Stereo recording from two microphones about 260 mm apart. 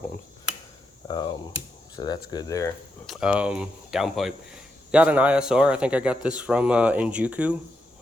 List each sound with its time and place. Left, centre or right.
1.0 s speech: centre
3.1 s a man's voice: centre